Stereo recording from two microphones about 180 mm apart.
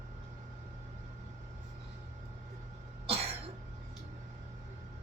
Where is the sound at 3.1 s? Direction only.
35° right (ahead or behind).